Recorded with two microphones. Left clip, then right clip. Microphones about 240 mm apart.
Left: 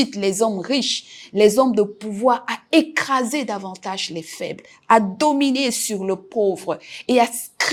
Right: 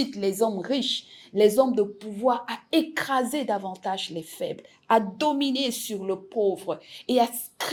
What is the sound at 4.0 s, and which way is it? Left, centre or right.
Speech, left.